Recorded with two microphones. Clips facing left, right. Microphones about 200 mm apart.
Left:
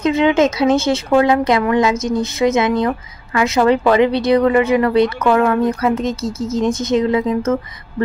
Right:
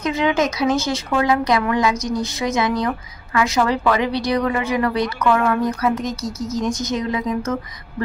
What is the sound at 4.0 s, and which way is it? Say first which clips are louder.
Speech: left 7 dB; 55° left (ahead or behind).